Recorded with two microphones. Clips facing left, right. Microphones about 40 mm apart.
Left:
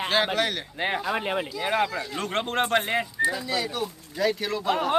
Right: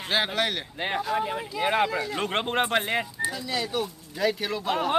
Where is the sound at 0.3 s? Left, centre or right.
Centre.